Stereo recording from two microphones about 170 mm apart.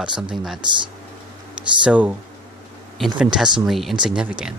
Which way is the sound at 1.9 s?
10° right (ahead or behind).